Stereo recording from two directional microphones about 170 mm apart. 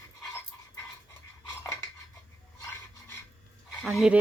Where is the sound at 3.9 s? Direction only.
5° right (ahead or behind).